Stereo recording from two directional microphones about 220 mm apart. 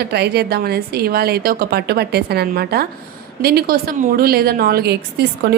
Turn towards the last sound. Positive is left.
turn(degrees=-50)  # may be behind; listen again after turning